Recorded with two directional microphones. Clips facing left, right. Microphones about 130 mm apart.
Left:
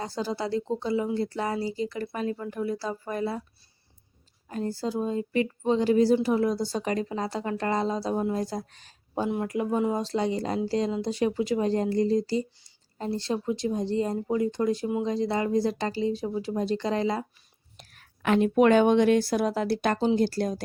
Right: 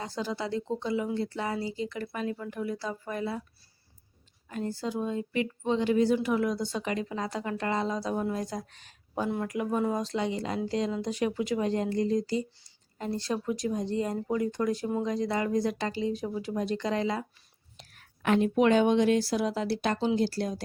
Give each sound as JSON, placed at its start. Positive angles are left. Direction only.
{"t": 0.0, "sound": "speech", "side_deg": 35}
{"t": 4.4, "sound": "speech", "side_deg": 35}
{"t": 9.6, "sound": "speech", "side_deg": 20}
{"t": 18.2, "sound": "a woman's voice", "side_deg": 80}
{"t": 18.5, "sound": "speech", "side_deg": 55}